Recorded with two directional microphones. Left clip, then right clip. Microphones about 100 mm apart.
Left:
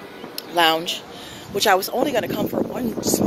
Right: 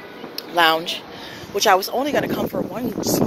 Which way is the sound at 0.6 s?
60° left (ahead or behind).